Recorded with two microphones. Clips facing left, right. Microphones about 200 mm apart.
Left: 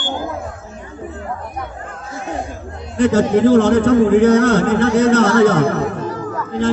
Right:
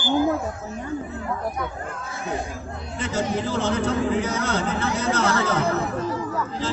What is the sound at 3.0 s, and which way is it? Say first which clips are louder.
A man's voice: left 13 dB; 65° left (ahead or behind).